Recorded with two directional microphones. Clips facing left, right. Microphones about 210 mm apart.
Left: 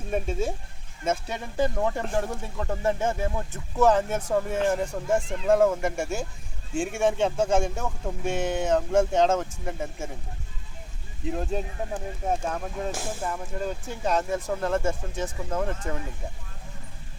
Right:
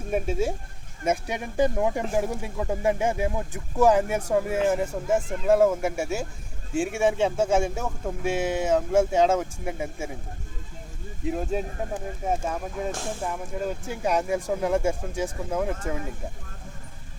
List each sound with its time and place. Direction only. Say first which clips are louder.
0.1 s speech: right 2 dB; 10° right (ahead or behind)
11.3 s speech: right 2 dB; 5° right (ahead or behind)